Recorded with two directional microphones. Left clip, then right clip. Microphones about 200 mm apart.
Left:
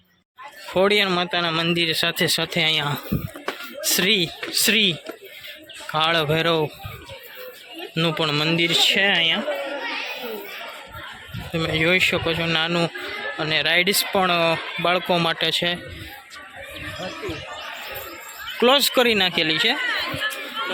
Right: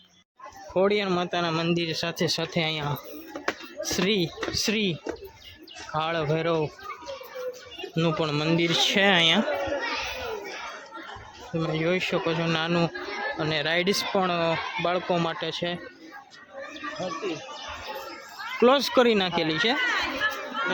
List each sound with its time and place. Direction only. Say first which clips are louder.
0.7 s speech: left 5 dB; 5° left (ahead or behind)
7.9 s speech: left 5 dB; centre (ahead or behind); by 9.4 s 20° right (ahead or behind)
11.5 s speech: left 7 dB; centre (ahead or behind)
18.6 s speech: left 3 dB; 5° right (ahead or behind)
19.9 s a sound: left 2 dB; 30° left (ahead or behind)